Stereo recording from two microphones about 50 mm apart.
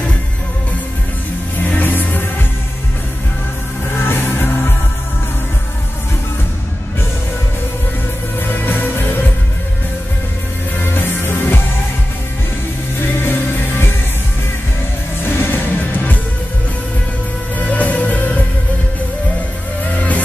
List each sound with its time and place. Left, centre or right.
1.6 s music: left
4.0 s music: left
8.5 s music: left
10.8 s music: left
13.0 s music: left
15.2 s music: left
17.6 s music: left